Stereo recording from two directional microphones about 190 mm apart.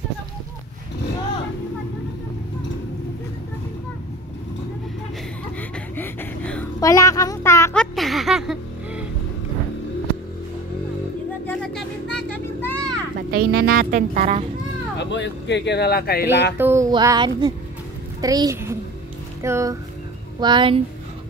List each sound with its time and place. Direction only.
5.6 s a sound: 10° left (ahead or behind)
7.8 s a sound: centre (ahead or behind)
11.4 s vehicle: 5° left (ahead or behind)
13.3 s speech: 55° right (ahead or behind)
15.0 s speech: 70° left (ahead or behind); by 16.3 s 55° left (ahead or behind)
16.5 s music: 15° right (ahead or behind)
20.3 s a woman's voice: 25° right (ahead or behind)